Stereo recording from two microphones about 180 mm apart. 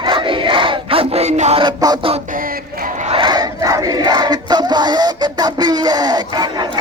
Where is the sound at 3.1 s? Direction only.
25° right (ahead or behind).